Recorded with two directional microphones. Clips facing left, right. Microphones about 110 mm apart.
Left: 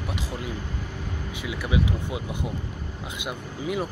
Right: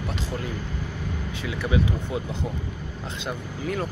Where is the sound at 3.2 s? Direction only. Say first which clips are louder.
Right 1 dB; 15° left (ahead or behind).